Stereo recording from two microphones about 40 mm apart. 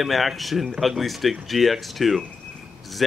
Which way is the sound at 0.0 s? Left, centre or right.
Centre.